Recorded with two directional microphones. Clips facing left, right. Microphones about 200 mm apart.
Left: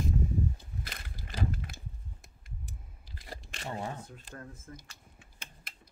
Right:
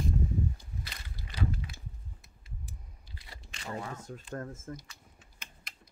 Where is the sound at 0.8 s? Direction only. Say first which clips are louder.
Left 2 dB; 50° left (ahead or behind).